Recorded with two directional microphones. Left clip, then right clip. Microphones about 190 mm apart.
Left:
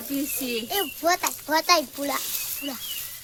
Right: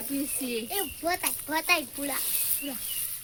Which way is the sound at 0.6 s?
25° left (ahead or behind).